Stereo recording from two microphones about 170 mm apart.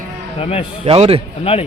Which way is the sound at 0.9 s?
35° right (ahead or behind).